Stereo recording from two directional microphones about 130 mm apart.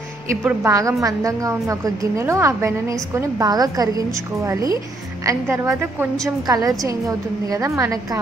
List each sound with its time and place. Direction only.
0.4 s a woman's voice: 10° right (ahead or behind)
0.7 s a woman's voice: 25° right (ahead or behind)